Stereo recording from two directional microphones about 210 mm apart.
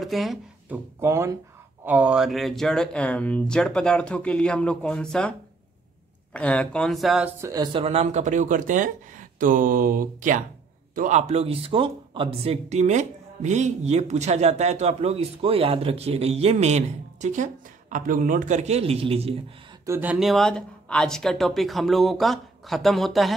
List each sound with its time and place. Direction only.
0.0 s a sound: centre (ahead or behind)
1.0 s speech: 15° right (ahead or behind); by 5.3 s 5° left (ahead or behind)
6.3 s speech: 5° left (ahead or behind)
7.4 s speech: 20° right (ahead or behind)
19.9 s speech: 10° right (ahead or behind)